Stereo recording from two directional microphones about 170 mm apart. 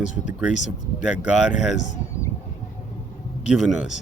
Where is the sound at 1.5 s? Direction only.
5° right (ahead or behind).